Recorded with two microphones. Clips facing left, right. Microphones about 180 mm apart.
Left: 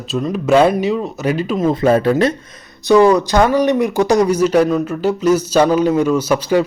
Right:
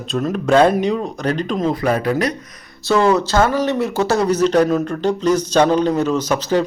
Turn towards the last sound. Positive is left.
turn(degrees=10)  # may be behind; listen again after turning